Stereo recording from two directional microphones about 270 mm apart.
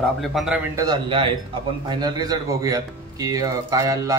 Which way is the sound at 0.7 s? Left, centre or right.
Centre.